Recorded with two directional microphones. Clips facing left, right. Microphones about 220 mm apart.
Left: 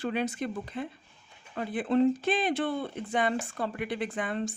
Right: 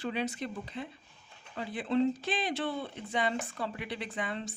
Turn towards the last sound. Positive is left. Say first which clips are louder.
# left 5 dB
turn(degrees=50)  # may be behind; listen again after turning